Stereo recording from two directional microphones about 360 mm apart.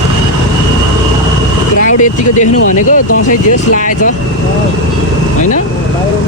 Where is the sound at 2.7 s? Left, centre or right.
Left.